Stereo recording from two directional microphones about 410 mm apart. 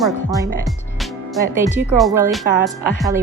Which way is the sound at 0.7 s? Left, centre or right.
Centre.